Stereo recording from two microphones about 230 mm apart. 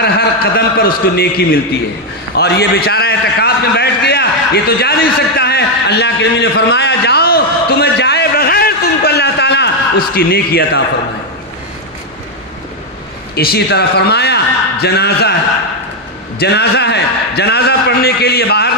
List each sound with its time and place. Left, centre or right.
0.0 s a man's voice: left
13.3 s a man's voice: left
16.3 s a man's voice: left